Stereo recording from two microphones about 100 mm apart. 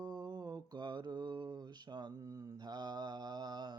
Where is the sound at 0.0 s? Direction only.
45° right (ahead or behind).